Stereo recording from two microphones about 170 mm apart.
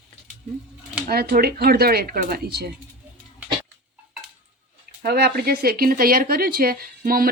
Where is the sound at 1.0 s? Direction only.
60° right (ahead or behind).